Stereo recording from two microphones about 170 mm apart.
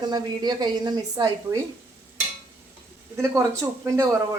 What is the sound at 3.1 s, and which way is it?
Speech, 20° right (ahead or behind).